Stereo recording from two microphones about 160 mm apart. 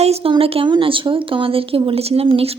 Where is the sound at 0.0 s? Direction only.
40° right (ahead or behind).